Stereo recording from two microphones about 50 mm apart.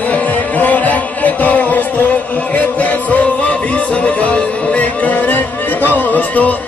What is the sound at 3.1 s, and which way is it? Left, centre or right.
Music, left.